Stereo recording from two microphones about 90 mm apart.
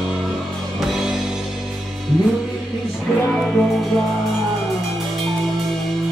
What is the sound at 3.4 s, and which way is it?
Music, centre (ahead or behind).